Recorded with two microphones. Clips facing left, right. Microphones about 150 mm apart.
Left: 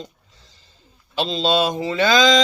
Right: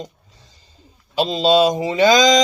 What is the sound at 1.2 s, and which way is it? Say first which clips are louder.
Mantra: right 5 dB; 10° right (ahead or behind).